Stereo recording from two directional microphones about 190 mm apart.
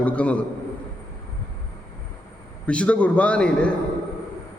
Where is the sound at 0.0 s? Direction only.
5° left (ahead or behind).